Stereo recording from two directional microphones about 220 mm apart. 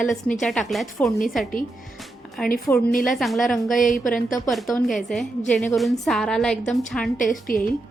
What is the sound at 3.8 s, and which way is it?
Speech, 35° left (ahead or behind).